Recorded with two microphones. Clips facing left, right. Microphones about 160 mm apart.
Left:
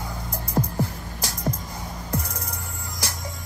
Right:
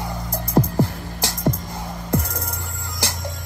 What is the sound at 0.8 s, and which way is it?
Music, 90° right.